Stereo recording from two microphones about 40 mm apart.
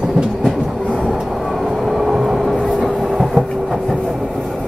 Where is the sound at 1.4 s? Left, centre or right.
Centre.